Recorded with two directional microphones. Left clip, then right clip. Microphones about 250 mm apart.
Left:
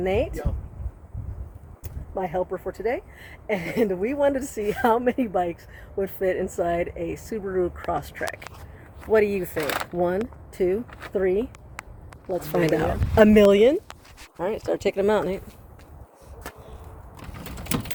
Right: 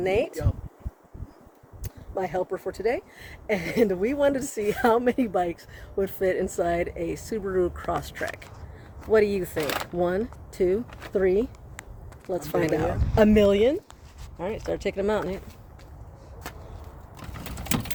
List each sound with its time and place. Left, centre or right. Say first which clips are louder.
0.0 s speech: even; centre
1.8 s a woman's voice: left 1 dB; centre
12.3 s speech: left 2 dB; centre
12.7 s speech: left 3 dB; left
14.3 s speech: left 4 dB; left